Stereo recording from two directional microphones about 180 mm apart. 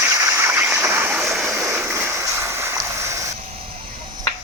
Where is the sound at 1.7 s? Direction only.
15° right (ahead or behind).